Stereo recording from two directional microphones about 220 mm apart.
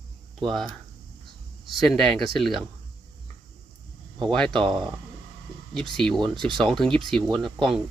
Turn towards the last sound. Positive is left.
turn(degrees=0)  # may be behind; listen again after turning